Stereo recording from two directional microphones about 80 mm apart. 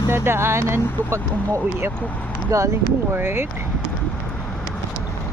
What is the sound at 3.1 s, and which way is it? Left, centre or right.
Speech, right.